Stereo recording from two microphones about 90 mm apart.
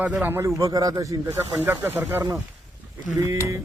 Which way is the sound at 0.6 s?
40° right (ahead or behind).